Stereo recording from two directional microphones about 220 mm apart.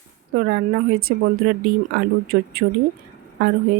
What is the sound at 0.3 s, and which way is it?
A woman's voice, 45° right (ahead or behind).